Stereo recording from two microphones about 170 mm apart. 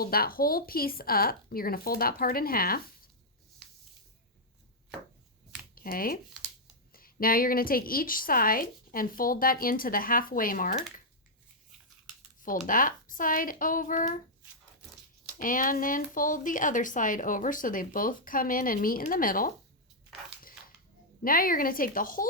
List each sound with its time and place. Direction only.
0.0 s a woman's voice: 60° left (ahead or behind)
5.7 s a woman's voice: 55° left (ahead or behind)
12.4 s speech: 55° left (ahead or behind)
15.4 s speech: 55° left (ahead or behind)
21.2 s a woman's voice: 55° left (ahead or behind)